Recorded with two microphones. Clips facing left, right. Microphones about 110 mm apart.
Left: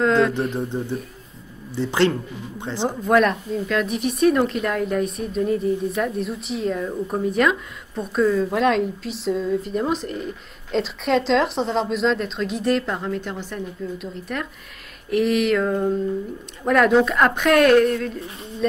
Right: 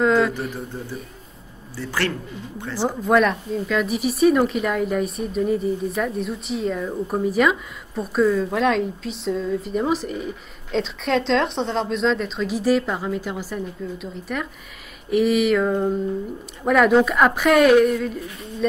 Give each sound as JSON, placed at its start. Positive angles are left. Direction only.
{"t": 0.0, "sound": "speech", "side_deg": -5}
{"t": 1.8, "sound": "a man's voice", "side_deg": 20}
{"t": 3.1, "sound": "speech", "side_deg": 0}